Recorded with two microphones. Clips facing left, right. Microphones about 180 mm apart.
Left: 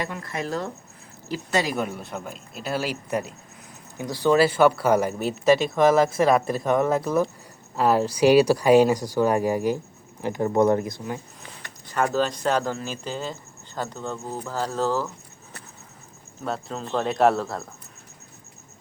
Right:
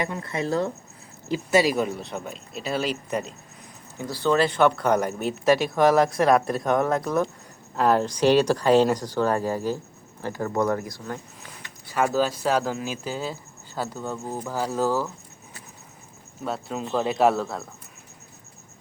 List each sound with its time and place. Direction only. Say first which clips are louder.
0.1 s speech: right 2 dB; 25° right (ahead or behind)
1.5 s speech: right 4 dB; 5° right (ahead or behind); by 11.2 s 15° left (ahead or behind)
11.9 s speech: right 1 dB; 5° right (ahead or behind)
16.4 s speech: right 1 dB; 5° right (ahead or behind)